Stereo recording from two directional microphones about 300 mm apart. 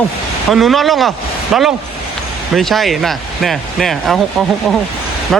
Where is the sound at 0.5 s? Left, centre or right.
Centre.